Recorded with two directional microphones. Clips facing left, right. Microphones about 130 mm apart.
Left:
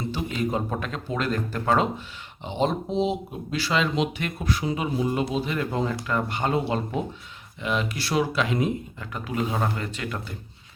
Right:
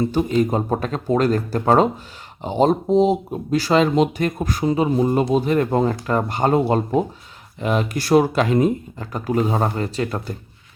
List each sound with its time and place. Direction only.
0.1 s speech: 40° right (ahead or behind)